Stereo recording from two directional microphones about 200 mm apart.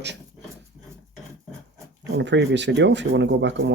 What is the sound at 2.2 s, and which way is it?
Speech, 60° right (ahead or behind).